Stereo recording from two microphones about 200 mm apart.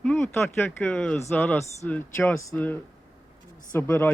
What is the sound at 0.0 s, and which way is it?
Speech, 5° left (ahead or behind).